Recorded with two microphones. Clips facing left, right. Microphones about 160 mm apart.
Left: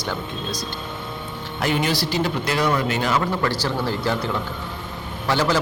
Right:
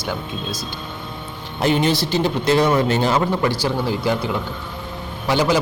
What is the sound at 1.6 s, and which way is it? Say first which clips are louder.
Speech: right 4 dB; 25° right (ahead or behind).